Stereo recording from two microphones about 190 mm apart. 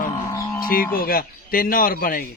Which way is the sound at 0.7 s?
50° left (ahead or behind).